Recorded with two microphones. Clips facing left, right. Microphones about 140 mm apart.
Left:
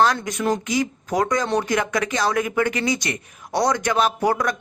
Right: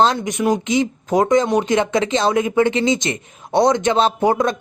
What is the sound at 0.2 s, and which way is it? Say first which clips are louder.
Speech: right 4 dB; 20° right (ahead or behind).